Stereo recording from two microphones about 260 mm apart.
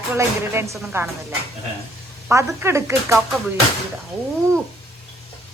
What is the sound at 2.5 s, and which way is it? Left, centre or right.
Speech, centre.